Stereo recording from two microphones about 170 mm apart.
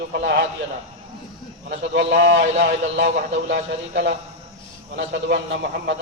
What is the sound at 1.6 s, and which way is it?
A man's voice, 80° right.